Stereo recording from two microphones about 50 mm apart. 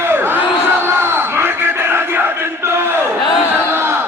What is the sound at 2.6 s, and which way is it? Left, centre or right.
Battle cry, right.